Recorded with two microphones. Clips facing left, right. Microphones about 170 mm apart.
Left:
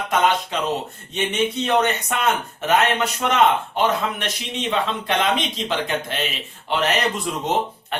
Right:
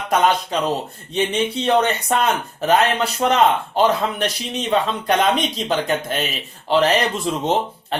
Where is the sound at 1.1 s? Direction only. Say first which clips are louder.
Right 2 dB; 30° right (ahead or behind).